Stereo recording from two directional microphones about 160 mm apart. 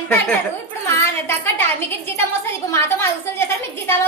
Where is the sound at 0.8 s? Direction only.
15° left (ahead or behind).